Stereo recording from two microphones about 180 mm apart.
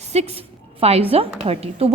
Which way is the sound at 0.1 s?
35° right (ahead or behind).